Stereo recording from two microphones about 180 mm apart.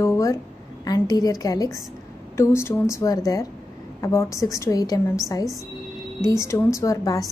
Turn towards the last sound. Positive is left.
turn(degrees=20)  # may be behind; listen again after turning